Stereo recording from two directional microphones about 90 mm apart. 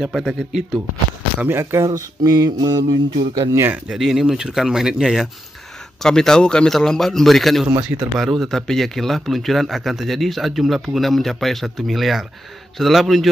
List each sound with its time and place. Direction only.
0.0 s a man's voice: centre (ahead or behind)
1.4 s speech: 25° right (ahead or behind); by 3.4 s 50° right (ahead or behind)
3.7 s a man's voice: 5° right (ahead or behind)
6.0 s a man's voice: 5° left (ahead or behind)